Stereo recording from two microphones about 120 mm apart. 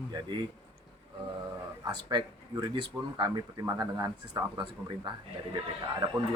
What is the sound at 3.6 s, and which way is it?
Speech, 25° right (ahead or behind).